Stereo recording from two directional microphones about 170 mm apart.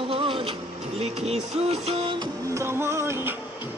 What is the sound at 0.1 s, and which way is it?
Printer, 35° right (ahead or behind).